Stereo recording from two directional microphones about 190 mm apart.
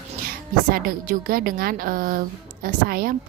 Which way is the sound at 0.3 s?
50° right (ahead or behind).